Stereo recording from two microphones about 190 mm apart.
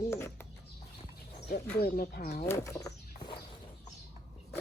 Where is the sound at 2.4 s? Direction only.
15° left (ahead or behind).